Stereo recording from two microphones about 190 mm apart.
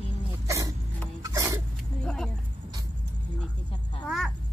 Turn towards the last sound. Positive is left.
turn(degrees=0)  # may be behind; listen again after turning